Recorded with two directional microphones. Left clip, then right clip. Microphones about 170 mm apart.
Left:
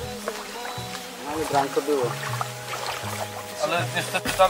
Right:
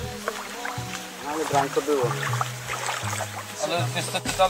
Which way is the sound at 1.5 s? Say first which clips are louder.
Even; centre (ahead or behind).